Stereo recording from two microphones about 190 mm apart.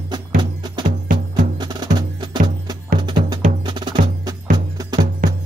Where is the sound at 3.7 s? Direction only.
25° right (ahead or behind).